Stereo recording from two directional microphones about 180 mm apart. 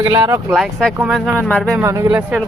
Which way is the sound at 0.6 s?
Centre (ahead or behind).